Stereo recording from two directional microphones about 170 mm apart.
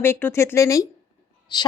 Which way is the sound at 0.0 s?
15° left (ahead or behind).